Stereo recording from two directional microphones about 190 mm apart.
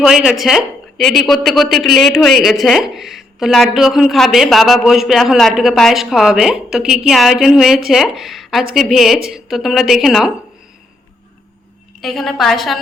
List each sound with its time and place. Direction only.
0.0 s a man's voice: 5° right (ahead or behind)
11.9 s a man's voice: centre (ahead or behind)